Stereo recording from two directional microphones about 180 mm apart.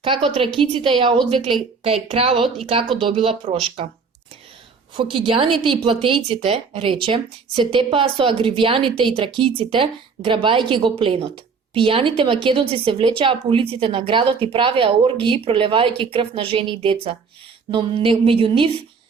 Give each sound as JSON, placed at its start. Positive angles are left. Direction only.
{"t": 0.0, "sound": "a woman's voice", "side_deg": -30}
{"t": 4.9, "sound": "a woman's voice", "side_deg": -30}